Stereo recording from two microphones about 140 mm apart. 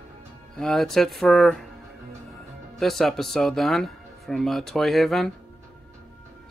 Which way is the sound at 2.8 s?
Centre (ahead or behind).